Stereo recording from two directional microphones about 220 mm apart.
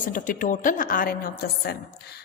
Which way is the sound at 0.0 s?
35° left (ahead or behind).